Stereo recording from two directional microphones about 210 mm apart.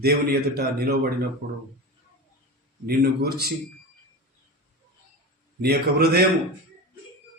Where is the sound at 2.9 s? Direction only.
50° right (ahead or behind).